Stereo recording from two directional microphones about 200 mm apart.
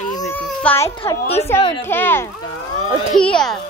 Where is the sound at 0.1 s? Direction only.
10° left (ahead or behind).